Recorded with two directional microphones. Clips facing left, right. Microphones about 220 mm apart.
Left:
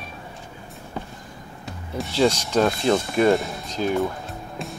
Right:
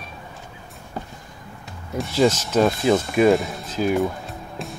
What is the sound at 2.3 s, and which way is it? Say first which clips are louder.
Speech: right 2 dB; 5° right (ahead or behind).